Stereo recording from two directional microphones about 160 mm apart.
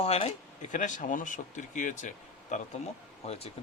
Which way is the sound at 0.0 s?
40° left (ahead or behind).